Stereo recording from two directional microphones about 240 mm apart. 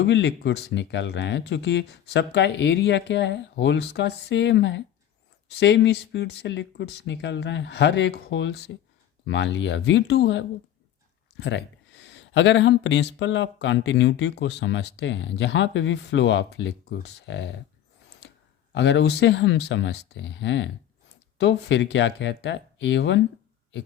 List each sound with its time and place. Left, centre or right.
0.0 s speech: left
18.7 s speech: left